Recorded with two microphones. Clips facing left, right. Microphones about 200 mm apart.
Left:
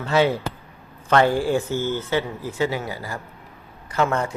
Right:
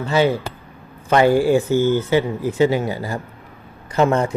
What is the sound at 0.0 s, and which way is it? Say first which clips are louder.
A man's voice: right 2 dB; centre (ahead or behind).